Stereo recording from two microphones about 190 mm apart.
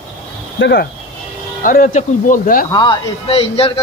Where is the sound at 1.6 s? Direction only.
45° left (ahead or behind).